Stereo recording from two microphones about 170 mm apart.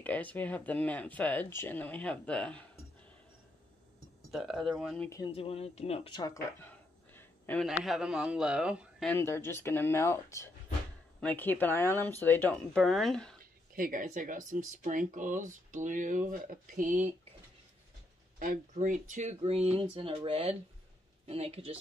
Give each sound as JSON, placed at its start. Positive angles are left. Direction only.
{"t": 0.0, "sound": "speech", "side_deg": 10}
{"t": 4.3, "sound": "a man's voice", "side_deg": 0}
{"t": 5.2, "sound": "speech", "side_deg": 35}
{"t": 7.6, "sound": "a man's voice", "side_deg": 0}
{"t": 9.0, "sound": "a man's voice", "side_deg": 10}
{"t": 13.4, "sound": "speech", "side_deg": -55}
{"t": 18.4, "sound": "speech", "side_deg": -50}